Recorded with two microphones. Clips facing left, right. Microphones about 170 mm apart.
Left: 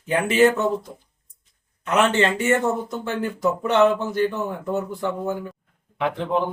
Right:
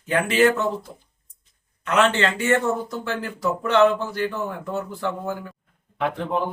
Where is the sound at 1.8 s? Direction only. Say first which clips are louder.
Left 1 dB; 20° left (ahead or behind).